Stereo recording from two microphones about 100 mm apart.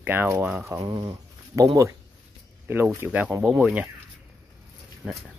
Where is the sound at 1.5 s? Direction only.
25° right (ahead or behind).